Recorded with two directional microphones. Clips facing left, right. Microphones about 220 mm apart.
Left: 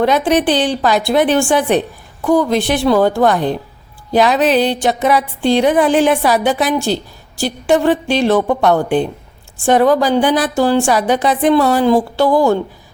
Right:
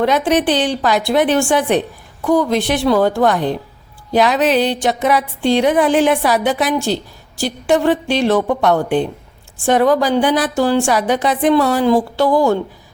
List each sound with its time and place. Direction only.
0.0 s speech: 30° left (ahead or behind)